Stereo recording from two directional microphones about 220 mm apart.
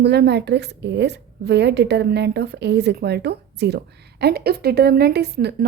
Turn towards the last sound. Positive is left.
turn(degrees=-50)  # may be behind; listen again after turning